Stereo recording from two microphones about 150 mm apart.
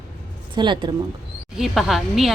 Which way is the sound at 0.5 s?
30° right (ahead or behind).